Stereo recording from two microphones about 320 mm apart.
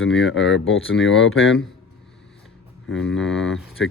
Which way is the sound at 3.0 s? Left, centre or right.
Centre.